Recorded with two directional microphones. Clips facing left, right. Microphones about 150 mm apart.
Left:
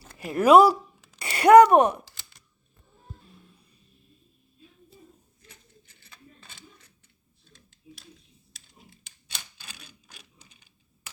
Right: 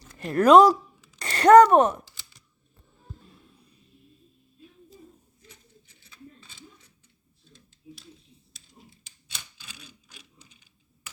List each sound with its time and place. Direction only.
0.2 s speech: 5° left (ahead or behind)
6.0 s mechanisms: 60° left (ahead or behind)
8.5 s a sound: 65° left (ahead or behind)